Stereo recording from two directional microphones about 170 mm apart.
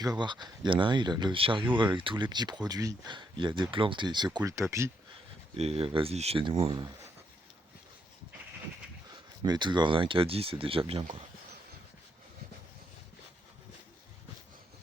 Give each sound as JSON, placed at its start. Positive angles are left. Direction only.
{"t": 0.0, "sound": "speech", "side_deg": -25}
{"t": 5.5, "sound": "speech", "side_deg": -35}
{"t": 9.4, "sound": "speech", "side_deg": -25}